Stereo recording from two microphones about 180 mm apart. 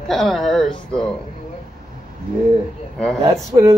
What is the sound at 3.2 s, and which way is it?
Speech, 20° right (ahead or behind).